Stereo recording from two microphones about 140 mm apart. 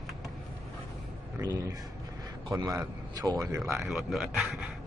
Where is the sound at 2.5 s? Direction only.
25° right (ahead or behind).